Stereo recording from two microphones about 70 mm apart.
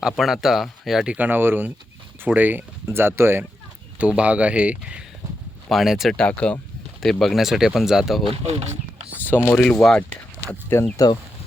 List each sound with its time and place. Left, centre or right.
0.0 s speech: centre
1.0 s speech: right
3.9 s speech: centre
5.6 s speech: centre
6.1 s speech: centre
7.0 s speech: centre
9.3 s speech: left
9.6 s speech: centre
10.9 s speech: left